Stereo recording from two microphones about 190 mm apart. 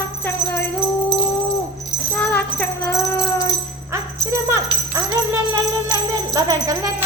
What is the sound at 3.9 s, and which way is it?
Music, 15° right (ahead or behind).